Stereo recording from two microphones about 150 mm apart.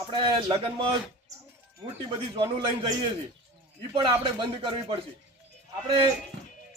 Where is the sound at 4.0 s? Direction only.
30° right (ahead or behind).